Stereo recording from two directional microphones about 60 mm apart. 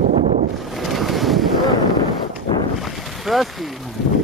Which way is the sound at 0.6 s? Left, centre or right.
Centre.